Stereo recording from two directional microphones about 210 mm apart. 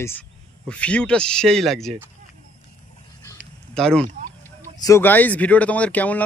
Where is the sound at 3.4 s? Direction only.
5° left (ahead or behind).